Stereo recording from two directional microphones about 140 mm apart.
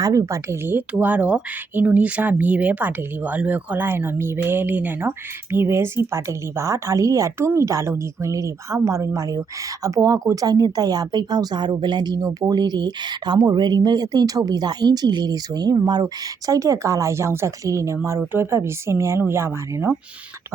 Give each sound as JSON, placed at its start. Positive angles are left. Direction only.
{"t": 0.0, "sound": "a woman's voice", "side_deg": -25}